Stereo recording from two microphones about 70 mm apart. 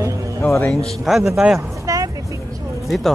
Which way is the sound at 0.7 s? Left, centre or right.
Centre.